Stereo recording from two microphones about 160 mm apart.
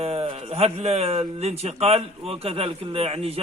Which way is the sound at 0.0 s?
35° right (ahead or behind).